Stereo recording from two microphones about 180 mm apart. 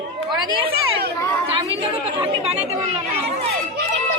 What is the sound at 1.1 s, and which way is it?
Chatter, 15° left (ahead or behind).